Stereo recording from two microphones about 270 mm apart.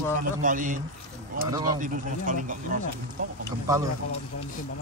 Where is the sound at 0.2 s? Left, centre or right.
Right.